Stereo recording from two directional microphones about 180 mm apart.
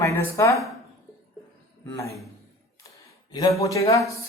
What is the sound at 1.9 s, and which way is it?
Speech, 15° left (ahead or behind).